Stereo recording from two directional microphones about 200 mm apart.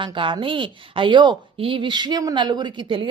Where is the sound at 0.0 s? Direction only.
25° right (ahead or behind).